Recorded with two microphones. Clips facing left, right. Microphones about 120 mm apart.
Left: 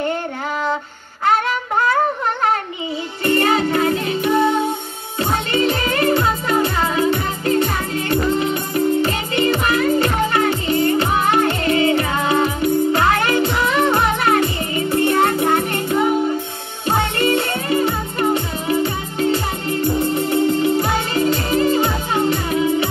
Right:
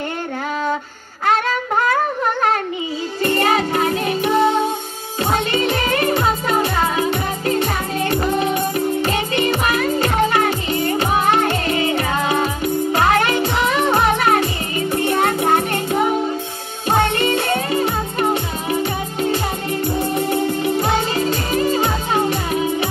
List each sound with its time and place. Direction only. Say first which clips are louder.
3.3 s music: left 2 dB; 25° right (ahead or behind)
14.4 s music: left 1 dB; 25° left (ahead or behind)
15.0 s music: left 2 dB; 25° right (ahead or behind)
17.2 s music: even; 25° right (ahead or behind)